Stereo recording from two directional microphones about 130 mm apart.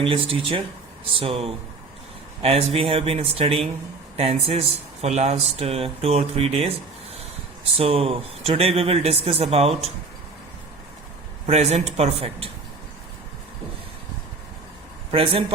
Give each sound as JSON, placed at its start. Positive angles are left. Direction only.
{"t": 0.0, "sound": "speech", "side_deg": -45}
{"t": 11.4, "sound": "speech", "side_deg": -55}
{"t": 15.1, "sound": "speech", "side_deg": -45}